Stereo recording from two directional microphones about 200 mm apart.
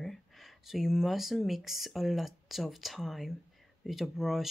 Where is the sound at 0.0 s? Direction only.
Centre (ahead or behind).